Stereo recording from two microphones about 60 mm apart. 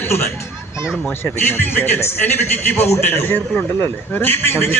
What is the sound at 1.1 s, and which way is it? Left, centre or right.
A man's voice, left.